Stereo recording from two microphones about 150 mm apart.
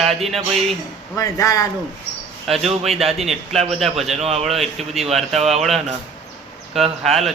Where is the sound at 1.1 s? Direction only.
20° left (ahead or behind).